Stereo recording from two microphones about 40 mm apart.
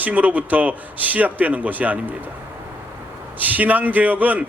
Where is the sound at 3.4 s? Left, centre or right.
Right.